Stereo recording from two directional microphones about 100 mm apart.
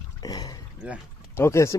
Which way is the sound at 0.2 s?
40° left (ahead or behind).